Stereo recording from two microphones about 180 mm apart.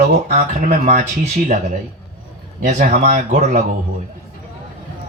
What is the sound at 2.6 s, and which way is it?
Speech, 45° right (ahead or behind).